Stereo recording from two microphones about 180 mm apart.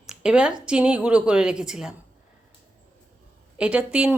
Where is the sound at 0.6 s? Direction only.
5° right (ahead or behind).